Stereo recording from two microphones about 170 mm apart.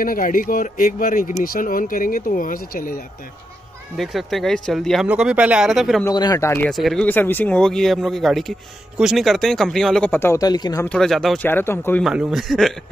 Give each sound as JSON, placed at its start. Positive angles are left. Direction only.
{"t": 0.0, "sound": "speech", "side_deg": 55}
{"t": 3.9, "sound": "speech", "side_deg": 0}
{"t": 6.0, "sound": "speech", "side_deg": 20}
{"t": 6.7, "sound": "speech", "side_deg": 0}
{"t": 10.9, "sound": "speech", "side_deg": 0}
{"t": 11.4, "sound": "speech", "side_deg": 15}
{"t": 12.0, "sound": "speech", "side_deg": -5}